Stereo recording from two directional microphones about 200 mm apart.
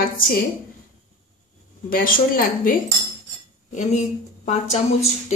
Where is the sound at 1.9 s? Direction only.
45° left (ahead or behind).